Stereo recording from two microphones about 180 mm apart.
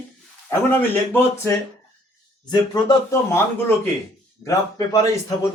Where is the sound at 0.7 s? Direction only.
10° left (ahead or behind).